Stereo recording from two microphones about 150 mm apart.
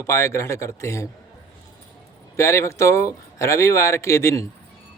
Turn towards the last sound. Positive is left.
turn(degrees=20)  # may be behind; listen again after turning